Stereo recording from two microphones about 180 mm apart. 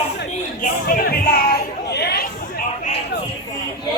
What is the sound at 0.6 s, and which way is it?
Speech, 55° left (ahead or behind).